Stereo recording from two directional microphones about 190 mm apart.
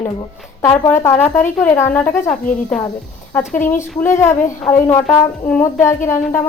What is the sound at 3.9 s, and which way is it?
Speech, 10° left (ahead or behind).